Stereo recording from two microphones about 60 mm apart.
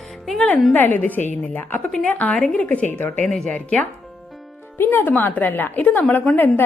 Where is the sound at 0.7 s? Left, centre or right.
Left.